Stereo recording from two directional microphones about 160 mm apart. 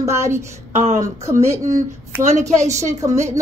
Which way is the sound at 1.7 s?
50° right (ahead or behind).